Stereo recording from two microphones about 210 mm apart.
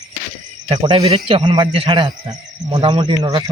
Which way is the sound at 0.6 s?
25° right (ahead or behind).